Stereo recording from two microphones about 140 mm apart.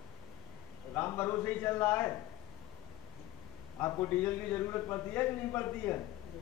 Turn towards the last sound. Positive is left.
turn(degrees=15)  # may be behind; listen again after turning